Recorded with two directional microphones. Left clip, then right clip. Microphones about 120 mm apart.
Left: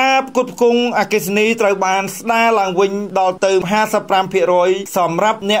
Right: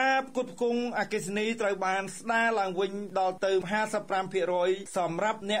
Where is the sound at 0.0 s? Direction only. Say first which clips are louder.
Left 13 dB; 20° left (ahead or behind).